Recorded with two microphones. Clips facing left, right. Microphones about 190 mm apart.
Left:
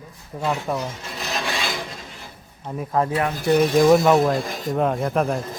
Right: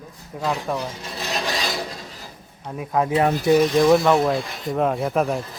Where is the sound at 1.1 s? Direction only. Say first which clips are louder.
Right 2 dB; 35° right (ahead or behind).